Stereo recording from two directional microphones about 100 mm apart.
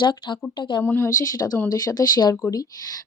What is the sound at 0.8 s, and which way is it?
Speech, 25° left (ahead or behind).